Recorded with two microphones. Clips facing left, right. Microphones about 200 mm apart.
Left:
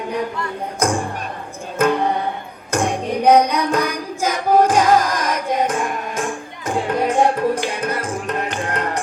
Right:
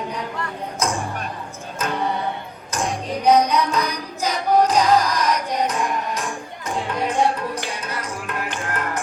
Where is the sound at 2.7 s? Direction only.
55° left (ahead or behind).